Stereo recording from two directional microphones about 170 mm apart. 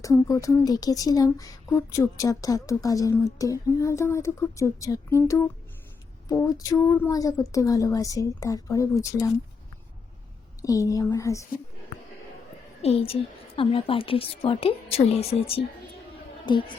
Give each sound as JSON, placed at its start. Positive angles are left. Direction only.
{"t": 0.0, "sound": "speech", "side_deg": 20}
{"t": 10.6, "sound": "speech", "side_deg": 20}
{"t": 12.8, "sound": "a woman's voice", "side_deg": 35}